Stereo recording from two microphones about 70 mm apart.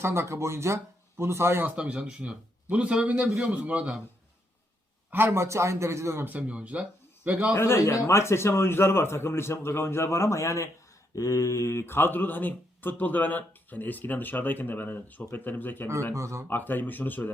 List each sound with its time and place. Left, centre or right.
0.0 s speech: right
1.6 s speech: centre
5.1 s speech: right
6.2 s speech: centre
7.5 s a man's voice: left
16.1 s speech: right
16.5 s speech: left